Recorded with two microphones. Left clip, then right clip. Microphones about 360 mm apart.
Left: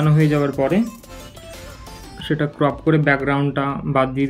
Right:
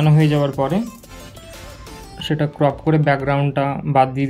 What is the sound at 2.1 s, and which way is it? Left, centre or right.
Speech, centre.